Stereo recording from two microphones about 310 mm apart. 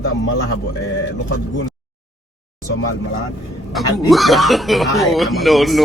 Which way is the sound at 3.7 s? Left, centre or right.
Centre.